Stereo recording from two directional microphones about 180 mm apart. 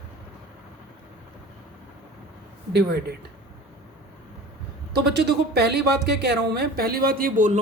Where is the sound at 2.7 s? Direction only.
65° right (ahead or behind).